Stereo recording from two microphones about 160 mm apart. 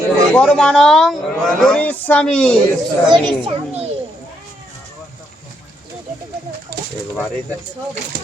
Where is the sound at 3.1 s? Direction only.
35° right (ahead or behind).